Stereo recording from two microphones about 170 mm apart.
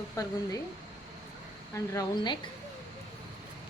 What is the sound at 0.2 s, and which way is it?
Speech, 20° left (ahead or behind).